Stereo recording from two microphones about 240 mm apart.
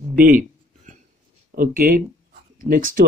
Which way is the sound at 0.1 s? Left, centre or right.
Right.